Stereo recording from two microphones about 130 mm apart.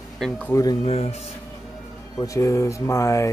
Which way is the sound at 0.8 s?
50° left (ahead or behind).